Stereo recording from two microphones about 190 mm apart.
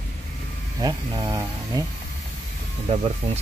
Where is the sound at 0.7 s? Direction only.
20° right (ahead or behind).